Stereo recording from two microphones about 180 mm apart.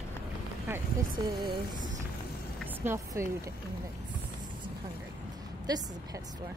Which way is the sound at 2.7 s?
15° right (ahead or behind).